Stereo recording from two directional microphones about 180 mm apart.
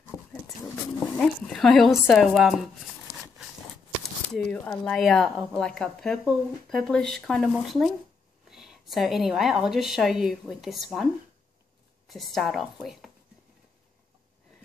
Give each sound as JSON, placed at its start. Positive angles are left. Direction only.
{"t": 0.1, "sound": "a sound", "side_deg": 15}
{"t": 0.9, "sound": "speech", "side_deg": 5}
{"t": 4.3, "sound": "a woman's voice", "side_deg": 5}
{"t": 12.1, "sound": "a woman's voice", "side_deg": 0}